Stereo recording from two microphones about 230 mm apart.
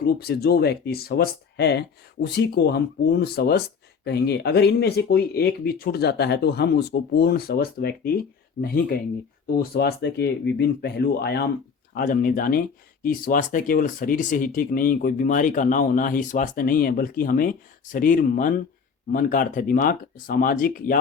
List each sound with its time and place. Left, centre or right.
0.0 s speech: left